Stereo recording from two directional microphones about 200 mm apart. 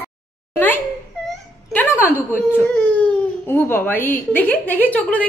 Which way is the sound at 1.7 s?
10° left (ahead or behind).